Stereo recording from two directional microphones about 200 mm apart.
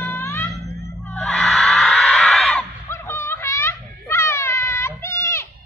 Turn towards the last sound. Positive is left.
turn(degrees=15)  # may be behind; listen again after turning